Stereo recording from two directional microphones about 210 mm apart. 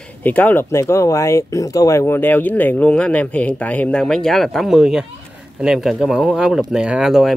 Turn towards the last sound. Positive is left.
turn(degrees=0)  # may be behind; listen again after turning